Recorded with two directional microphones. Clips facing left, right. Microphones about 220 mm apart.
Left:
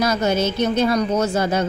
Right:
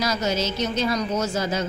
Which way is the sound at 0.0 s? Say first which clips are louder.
Left 5 dB; 55° left (ahead or behind).